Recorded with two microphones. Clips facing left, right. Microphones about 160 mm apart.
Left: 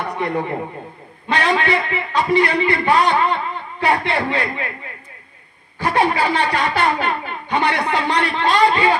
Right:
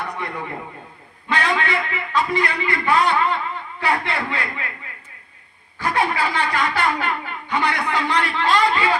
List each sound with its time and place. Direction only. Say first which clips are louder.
0.0 s a sound: left 7 dB; 30° left (ahead or behind)
1.3 s a man's voice: left 4 dB; 30° left (ahead or behind)
5.8 s a man's voice: left 4 dB; 25° left (ahead or behind)
8.3 s a man's voice: left 4 dB; 40° left (ahead or behind)